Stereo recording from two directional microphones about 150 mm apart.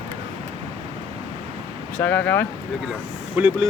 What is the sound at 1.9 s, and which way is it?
Speech, 10° left (ahead or behind).